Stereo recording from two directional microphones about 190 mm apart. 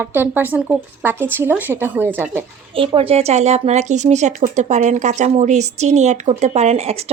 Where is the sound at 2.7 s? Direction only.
30° right (ahead or behind).